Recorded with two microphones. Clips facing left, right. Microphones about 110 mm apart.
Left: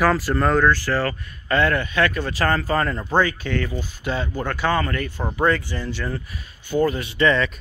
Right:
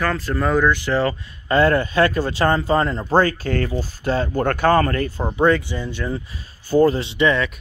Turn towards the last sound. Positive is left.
turn(degrees=-10)  # may be behind; listen again after turning